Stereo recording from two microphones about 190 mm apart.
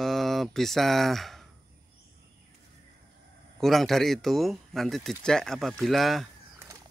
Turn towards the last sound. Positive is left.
turn(degrees=0)  # may be behind; listen again after turning